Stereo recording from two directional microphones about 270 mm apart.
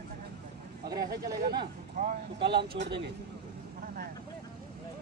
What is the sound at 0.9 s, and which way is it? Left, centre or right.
Speech, right.